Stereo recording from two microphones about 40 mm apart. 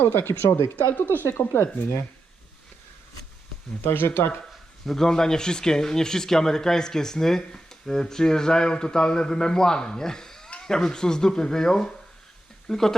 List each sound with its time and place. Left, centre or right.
0.0 s speech: left
0.9 s speech: left
3.8 s speech: left
5.0 s speech: centre